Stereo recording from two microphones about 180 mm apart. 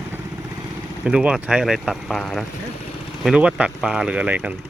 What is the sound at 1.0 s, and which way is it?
Speech, 5° right (ahead or behind).